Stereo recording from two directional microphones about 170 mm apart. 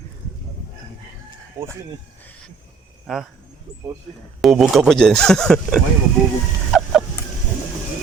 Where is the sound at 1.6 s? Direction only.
15° right (ahead or behind).